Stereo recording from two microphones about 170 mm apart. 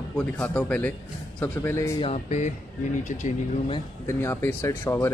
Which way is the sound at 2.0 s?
40° left (ahead or behind).